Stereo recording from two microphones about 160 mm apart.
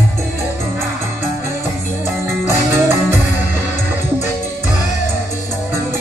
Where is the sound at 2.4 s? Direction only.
15° right (ahead or behind).